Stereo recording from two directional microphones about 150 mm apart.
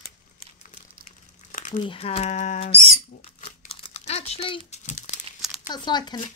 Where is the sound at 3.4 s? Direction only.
40° left (ahead or behind).